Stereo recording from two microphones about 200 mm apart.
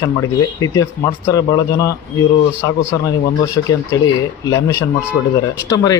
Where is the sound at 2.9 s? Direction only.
15° left (ahead or behind).